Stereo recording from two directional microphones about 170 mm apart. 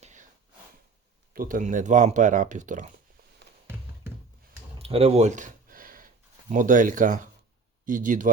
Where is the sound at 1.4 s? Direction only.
50° right (ahead or behind).